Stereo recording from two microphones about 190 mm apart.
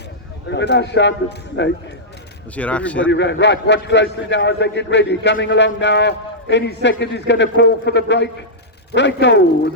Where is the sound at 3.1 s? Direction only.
65° left (ahead or behind).